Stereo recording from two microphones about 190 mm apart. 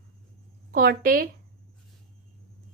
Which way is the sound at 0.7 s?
50° right (ahead or behind).